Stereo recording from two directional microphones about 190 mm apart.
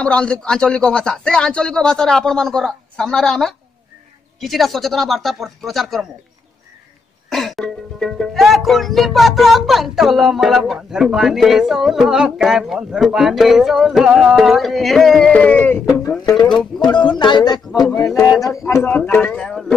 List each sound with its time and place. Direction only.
0.0 s speech: 5° left (ahead or behind)
7.2 s speech: centre (ahead or behind); by 16.3 s 20° left (ahead or behind)
16.3 s speech: centre (ahead or behind)
16.8 s a man's voice: 25° left (ahead or behind); by 19.6 s 5° left (ahead or behind)